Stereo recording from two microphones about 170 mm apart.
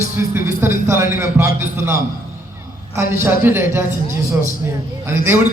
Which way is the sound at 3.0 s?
15° right (ahead or behind).